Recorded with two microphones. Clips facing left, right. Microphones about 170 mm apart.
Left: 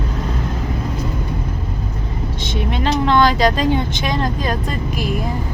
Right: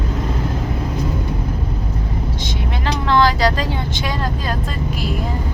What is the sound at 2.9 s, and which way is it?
Speech, 20° left (ahead or behind).